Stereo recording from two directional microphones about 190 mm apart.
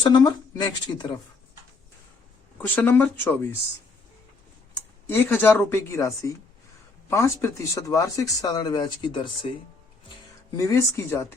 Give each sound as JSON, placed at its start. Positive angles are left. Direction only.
{"t": 0.0, "sound": "speech", "side_deg": 25}
{"t": 2.6, "sound": "speech", "side_deg": 10}
{"t": 5.0, "sound": "speech", "side_deg": 10}
{"t": 10.6, "sound": "speech", "side_deg": 15}